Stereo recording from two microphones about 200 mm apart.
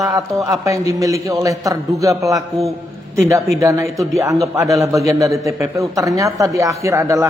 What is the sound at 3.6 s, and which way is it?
Speech, 15° right (ahead or behind).